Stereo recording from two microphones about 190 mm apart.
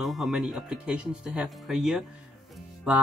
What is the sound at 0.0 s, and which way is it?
Speech, centre (ahead or behind).